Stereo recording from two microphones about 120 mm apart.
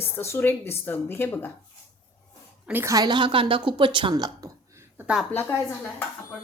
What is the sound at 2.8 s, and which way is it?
Speech, 30° right (ahead or behind).